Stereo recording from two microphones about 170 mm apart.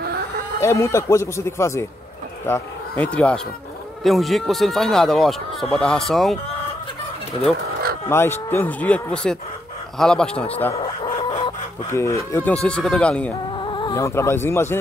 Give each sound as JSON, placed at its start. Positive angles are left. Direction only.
{"t": 0.6, "sound": "speech", "side_deg": 15}
{"t": 8.1, "sound": "speech", "side_deg": 15}
{"t": 11.2, "sound": "chicken", "side_deg": 30}
{"t": 11.9, "sound": "speech", "side_deg": 15}
{"t": 13.7, "sound": "a sound", "side_deg": 30}
{"t": 14.0, "sound": "speech", "side_deg": 15}